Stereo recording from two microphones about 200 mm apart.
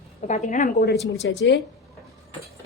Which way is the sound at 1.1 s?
60° left (ahead or behind).